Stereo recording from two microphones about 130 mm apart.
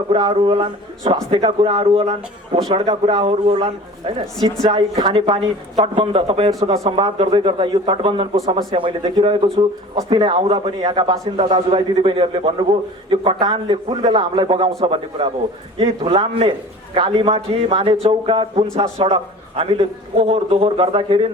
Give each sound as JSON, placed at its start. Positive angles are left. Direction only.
{"t": 0.1, "sound": "a man's voice", "side_deg": -40}
{"t": 4.6, "sound": "a man's voice", "side_deg": -30}
{"t": 5.8, "sound": "a man's voice", "side_deg": -45}
{"t": 6.7, "sound": "a man's voice", "side_deg": -35}
{"t": 7.2, "sound": "a man's voice", "side_deg": -45}